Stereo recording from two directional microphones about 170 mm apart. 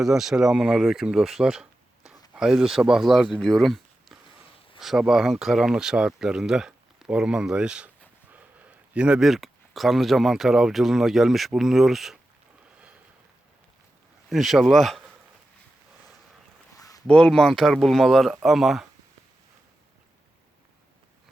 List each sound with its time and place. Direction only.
0.0 s speech: centre (ahead or behind)
14.3 s speech: centre (ahead or behind)
16.7 s a sound: 20° left (ahead or behind)
17.1 s speech: 5° left (ahead or behind)